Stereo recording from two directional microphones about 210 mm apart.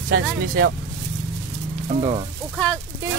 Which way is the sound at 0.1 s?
50° right (ahead or behind).